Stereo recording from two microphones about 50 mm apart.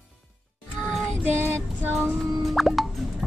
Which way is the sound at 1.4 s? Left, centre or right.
Right.